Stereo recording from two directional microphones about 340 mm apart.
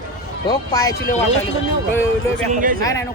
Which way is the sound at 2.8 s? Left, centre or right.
Centre.